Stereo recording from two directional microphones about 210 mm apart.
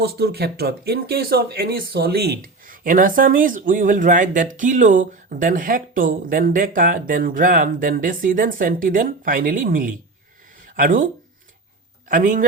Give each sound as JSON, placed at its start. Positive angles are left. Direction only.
{"t": 0.0, "sound": "speech", "side_deg": -50}
{"t": 12.0, "sound": "speech", "side_deg": -40}